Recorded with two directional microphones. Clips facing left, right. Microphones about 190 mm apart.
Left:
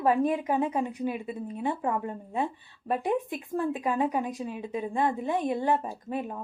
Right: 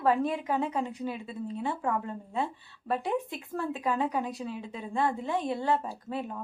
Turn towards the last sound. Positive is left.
turn(degrees=15)  # may be behind; listen again after turning